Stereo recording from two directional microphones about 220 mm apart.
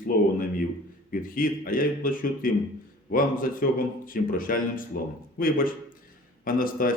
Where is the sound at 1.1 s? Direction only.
40° left (ahead or behind).